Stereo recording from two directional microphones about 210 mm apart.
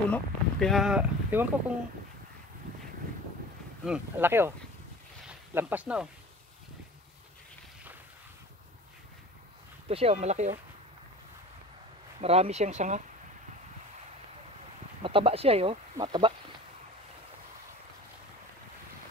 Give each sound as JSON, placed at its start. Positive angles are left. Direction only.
{"t": 0.1, "sound": "speech", "side_deg": 0}
{"t": 3.8, "sound": "speech", "side_deg": -5}
{"t": 5.2, "sound": "a sound", "side_deg": -10}
{"t": 9.8, "sound": "speech", "side_deg": -30}
{"t": 12.2, "sound": "speech", "side_deg": -30}
{"t": 15.0, "sound": "speech", "side_deg": -25}